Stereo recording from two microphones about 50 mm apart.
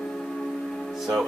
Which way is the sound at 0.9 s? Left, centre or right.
Centre.